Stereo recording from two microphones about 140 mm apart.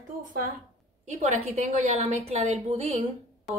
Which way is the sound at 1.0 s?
55° right (ahead or behind).